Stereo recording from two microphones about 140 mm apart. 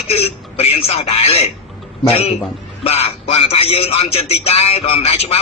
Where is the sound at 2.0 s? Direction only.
45° left (ahead or behind).